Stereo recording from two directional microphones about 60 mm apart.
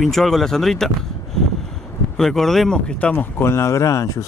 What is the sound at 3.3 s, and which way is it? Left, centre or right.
Speech, left.